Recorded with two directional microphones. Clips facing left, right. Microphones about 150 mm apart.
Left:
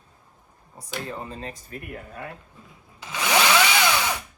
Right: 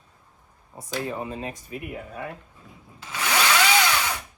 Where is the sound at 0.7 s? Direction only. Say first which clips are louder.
Right 4 dB; 15° right (ahead or behind).